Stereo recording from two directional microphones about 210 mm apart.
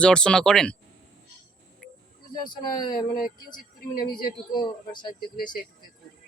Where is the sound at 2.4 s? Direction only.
20° left (ahead or behind).